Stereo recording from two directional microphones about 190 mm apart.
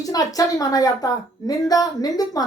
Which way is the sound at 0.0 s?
20° left (ahead or behind).